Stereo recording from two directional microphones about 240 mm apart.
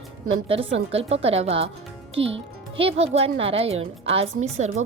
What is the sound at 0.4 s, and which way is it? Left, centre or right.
Speech, right.